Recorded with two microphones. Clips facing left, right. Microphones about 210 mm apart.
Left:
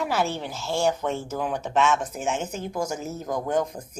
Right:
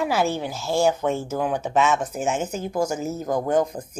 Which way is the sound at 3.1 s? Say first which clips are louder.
Right 4 dB; 35° right (ahead or behind).